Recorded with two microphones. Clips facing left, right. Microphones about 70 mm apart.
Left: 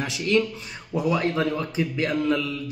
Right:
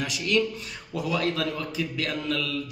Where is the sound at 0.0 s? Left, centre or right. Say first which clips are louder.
Left 2 dB; left.